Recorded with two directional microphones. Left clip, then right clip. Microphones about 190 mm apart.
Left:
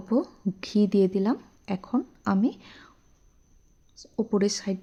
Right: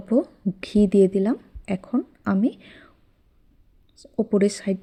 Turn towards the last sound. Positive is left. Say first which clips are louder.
# right 4 dB
turn(degrees=-15)  # may be behind; listen again after turning